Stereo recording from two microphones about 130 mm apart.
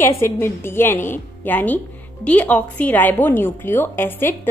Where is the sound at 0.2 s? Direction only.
20° left (ahead or behind).